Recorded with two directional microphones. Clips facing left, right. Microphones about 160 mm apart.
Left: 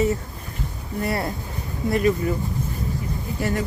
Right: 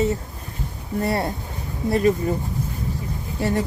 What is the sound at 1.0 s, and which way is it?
Speech, 30° right (ahead or behind).